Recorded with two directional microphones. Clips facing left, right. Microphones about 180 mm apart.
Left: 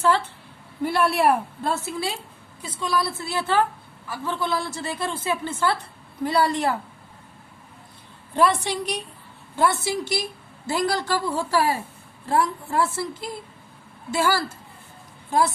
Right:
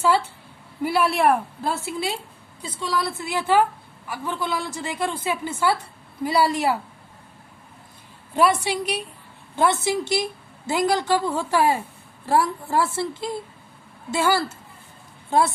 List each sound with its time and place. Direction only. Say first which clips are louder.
0.0 s a woman's voice: right 1 dB; 10° right (ahead or behind)
1.7 s a woman's voice: even; 10° right (ahead or behind)
8.4 s a woman's voice: right 1 dB; 10° right (ahead or behind)
9.6 s a woman's voice: right 2 dB; 20° right (ahead or behind)